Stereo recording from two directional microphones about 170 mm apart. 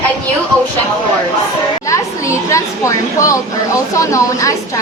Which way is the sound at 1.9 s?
15° left (ahead or behind).